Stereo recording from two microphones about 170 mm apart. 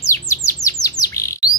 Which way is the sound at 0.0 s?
20° left (ahead or behind).